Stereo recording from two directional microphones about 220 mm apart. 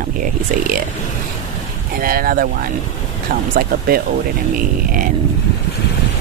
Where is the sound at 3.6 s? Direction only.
45° right (ahead or behind).